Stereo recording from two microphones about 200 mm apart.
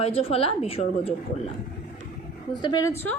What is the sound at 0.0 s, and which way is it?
A woman's voice, 30° left (ahead or behind).